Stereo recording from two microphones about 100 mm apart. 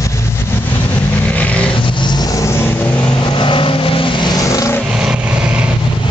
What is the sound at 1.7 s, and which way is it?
Vehicle, 55° left (ahead or behind).